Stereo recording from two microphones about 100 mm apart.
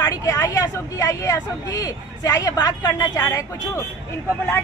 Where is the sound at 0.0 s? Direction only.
30° left (ahead or behind).